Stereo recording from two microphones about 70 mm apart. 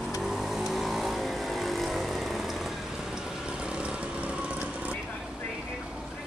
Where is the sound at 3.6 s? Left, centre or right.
Centre.